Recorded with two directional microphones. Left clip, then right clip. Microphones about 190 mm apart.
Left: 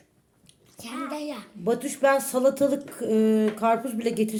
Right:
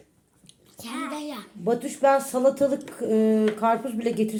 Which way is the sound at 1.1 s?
15° left (ahead or behind).